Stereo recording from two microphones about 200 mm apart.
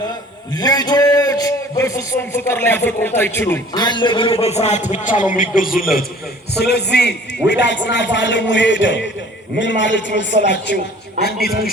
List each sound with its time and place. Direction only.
0.5 s a man's voice: 20° left (ahead or behind)
3.8 s a man's voice: 25° left (ahead or behind); by 5.8 s 45° left (ahead or behind)
6.6 s a man's voice: 55° left (ahead or behind)